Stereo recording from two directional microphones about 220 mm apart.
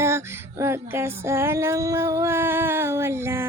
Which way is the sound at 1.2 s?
10° right (ahead or behind).